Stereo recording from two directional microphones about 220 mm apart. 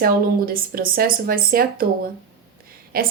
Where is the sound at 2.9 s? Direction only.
40° right (ahead or behind).